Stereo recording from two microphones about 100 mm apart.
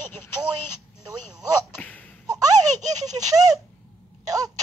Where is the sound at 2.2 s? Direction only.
35° right (ahead or behind).